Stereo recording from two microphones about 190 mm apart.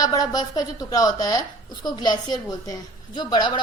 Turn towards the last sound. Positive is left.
turn(degrees=25)  # may be behind; listen again after turning